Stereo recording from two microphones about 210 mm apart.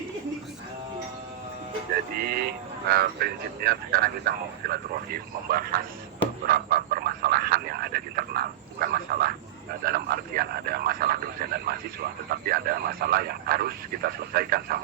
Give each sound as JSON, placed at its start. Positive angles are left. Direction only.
{"t": 2.1, "sound": "speech", "side_deg": -45}
{"t": 6.5, "sound": "frog", "side_deg": -45}
{"t": 9.8, "sound": "speech", "side_deg": -45}